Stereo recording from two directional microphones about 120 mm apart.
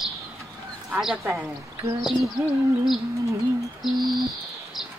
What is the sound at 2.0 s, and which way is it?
Speech, 5° right (ahead or behind).